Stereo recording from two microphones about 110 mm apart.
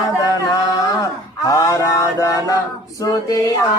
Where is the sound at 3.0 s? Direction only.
35° left (ahead or behind).